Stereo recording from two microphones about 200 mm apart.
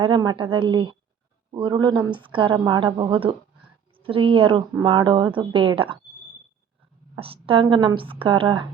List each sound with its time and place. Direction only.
0.0 s a woman's voice: 20° right (ahead or behind)
7.2 s a woman's voice: 25° right (ahead or behind)